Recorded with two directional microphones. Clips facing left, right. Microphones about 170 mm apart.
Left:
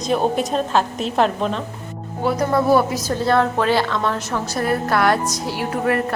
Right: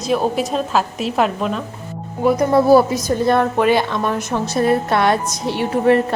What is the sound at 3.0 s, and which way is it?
A woman's voice, 15° right (ahead or behind).